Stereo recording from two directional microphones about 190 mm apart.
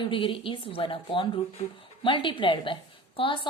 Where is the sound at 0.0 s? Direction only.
25° left (ahead or behind).